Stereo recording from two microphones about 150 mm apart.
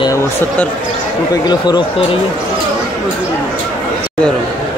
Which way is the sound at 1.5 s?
30° left (ahead or behind).